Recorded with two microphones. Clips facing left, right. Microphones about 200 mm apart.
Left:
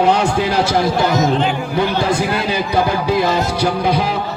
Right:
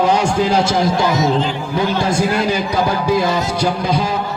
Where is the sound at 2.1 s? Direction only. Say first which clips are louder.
Right 1 dB; 60° left (ahead or behind).